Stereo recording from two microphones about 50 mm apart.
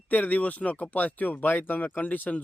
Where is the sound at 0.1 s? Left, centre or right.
Left.